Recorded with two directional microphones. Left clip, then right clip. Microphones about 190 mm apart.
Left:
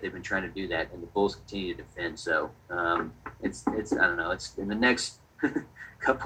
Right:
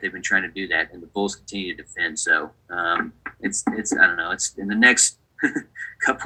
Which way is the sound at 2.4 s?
55° right (ahead or behind).